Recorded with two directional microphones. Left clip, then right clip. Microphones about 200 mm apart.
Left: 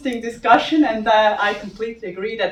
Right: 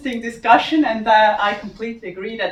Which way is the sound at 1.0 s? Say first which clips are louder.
Right 3 dB; 15° left (ahead or behind).